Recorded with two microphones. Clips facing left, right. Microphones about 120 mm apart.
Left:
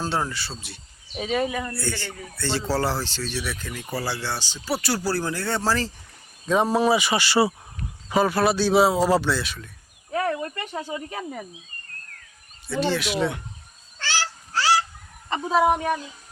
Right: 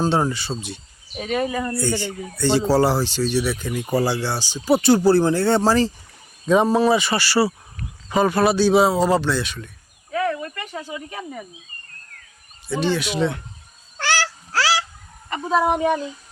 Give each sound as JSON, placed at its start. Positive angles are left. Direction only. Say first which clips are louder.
{"t": 0.0, "sound": "speech", "louder": "right 6 dB", "side_deg": -20}
{"t": 1.1, "sound": "speech", "louder": "right 2 dB", "side_deg": 0}
{"t": 1.7, "sound": "speech", "louder": "right 7 dB", "side_deg": -15}
{"t": 6.7, "sound": "speech", "louder": "right 3 dB", "side_deg": 10}
{"t": 8.1, "sound": "speech", "louder": "right 3 dB", "side_deg": 5}
{"t": 10.1, "sound": "a sound", "louder": "right 2 dB", "side_deg": 35}
{"t": 10.4, "sound": "speech", "louder": "left 1 dB", "side_deg": 35}
{"t": 12.6, "sound": "speech", "louder": "right 2 dB", "side_deg": 0}
{"t": 14.0, "sound": "a sound", "louder": "right 6 dB", "side_deg": -70}
{"t": 15.5, "sound": "speech", "louder": "right 1 dB", "side_deg": 5}